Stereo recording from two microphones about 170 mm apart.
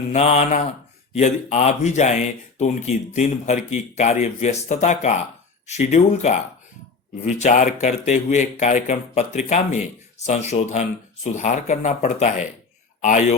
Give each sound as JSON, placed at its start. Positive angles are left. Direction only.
{"t": 0.1, "sound": "speech", "side_deg": 40}